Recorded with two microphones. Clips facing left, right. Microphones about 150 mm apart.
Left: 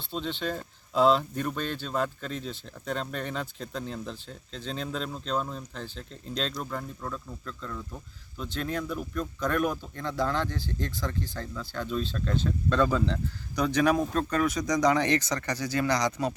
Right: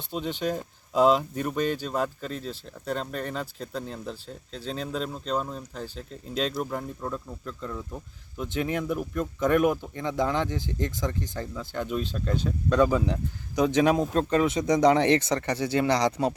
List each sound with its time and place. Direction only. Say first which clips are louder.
0.1 s speech: right 3 dB; 10° right (ahead or behind); by 16.3 s 30° right (ahead or behind)